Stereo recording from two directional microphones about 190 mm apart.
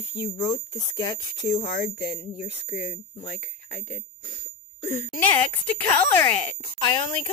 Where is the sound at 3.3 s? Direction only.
5° left (ahead or behind).